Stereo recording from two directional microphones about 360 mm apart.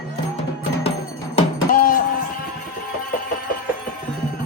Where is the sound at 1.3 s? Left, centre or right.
Left.